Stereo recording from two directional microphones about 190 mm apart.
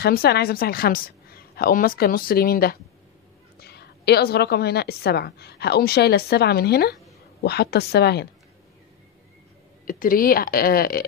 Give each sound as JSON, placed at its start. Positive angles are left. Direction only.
{"t": 0.0, "sound": "a woman's voice", "side_deg": 55}
{"t": 9.8, "sound": "a woman's voice", "side_deg": 45}